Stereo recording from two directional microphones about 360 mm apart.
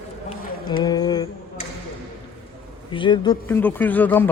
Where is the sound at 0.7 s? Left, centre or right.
Centre.